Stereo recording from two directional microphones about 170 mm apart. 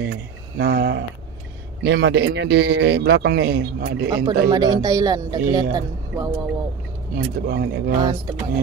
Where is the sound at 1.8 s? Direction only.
90° right; by 4.0 s 65° right (ahead or behind).